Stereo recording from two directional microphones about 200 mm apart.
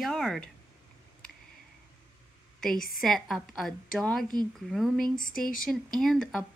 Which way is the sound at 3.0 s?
Centre (ahead or behind).